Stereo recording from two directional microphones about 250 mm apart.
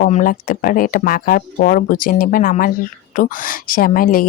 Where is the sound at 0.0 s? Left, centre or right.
Left.